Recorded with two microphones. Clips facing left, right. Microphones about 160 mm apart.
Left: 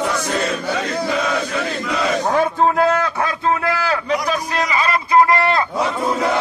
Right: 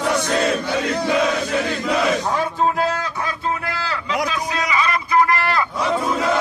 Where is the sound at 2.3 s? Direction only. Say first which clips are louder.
Left 4 dB; 55° left (ahead or behind).